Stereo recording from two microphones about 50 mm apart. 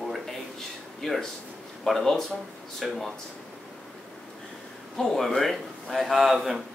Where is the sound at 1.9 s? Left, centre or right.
Centre.